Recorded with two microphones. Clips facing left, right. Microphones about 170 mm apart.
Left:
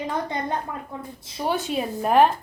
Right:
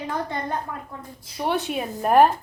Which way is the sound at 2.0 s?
10° right (ahead or behind).